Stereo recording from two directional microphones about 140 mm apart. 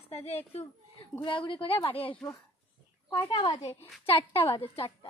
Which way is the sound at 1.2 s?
35° left (ahead or behind).